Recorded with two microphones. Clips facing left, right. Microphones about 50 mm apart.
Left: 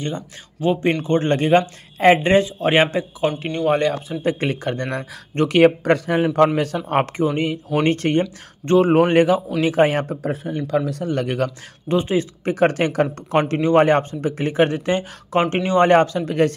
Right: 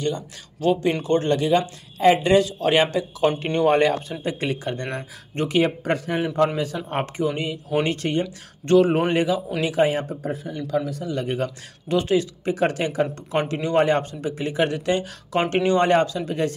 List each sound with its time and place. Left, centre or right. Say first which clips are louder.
0.0 s speech: right 1 dB; left
3.3 s speech: right 1 dB; centre
4.2 s speech: left 4 dB; left
8.6 s speech: left 3 dB; left
10.2 s speech: left 4 dB; left
11.9 s speech: left 1 dB; left
12.4 s speech: left 4 dB; left
15.5 s speech: even; centre
15.8 s speech: left 4 dB; left